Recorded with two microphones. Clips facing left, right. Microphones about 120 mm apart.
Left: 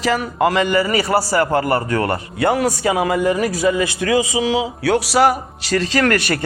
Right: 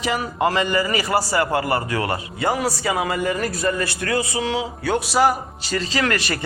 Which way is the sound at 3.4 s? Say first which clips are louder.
Left 5 dB; 75° left (ahead or behind).